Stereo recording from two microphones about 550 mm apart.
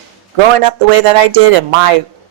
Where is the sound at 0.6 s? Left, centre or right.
Right.